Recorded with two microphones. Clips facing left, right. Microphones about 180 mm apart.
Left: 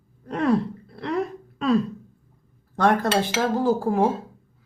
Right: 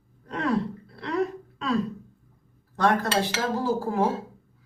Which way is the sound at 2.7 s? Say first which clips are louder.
Left 3 dB; 55° left (ahead or behind).